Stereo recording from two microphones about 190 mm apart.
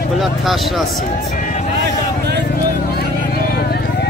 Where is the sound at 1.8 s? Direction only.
60° right (ahead or behind).